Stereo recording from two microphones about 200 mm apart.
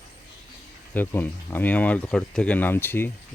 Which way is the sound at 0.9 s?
10° left (ahead or behind).